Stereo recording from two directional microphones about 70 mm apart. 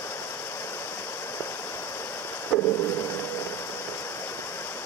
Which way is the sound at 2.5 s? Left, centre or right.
Left.